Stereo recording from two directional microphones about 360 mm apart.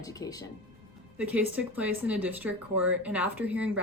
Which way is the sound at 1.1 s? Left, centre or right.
Centre.